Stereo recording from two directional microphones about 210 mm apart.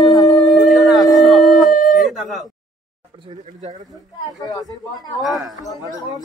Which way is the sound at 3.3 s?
35° right (ahead or behind).